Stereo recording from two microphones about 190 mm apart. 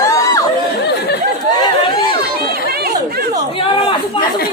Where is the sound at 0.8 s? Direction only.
60° left (ahead or behind).